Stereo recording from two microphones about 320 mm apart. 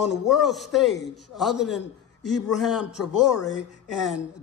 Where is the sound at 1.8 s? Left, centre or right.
Left.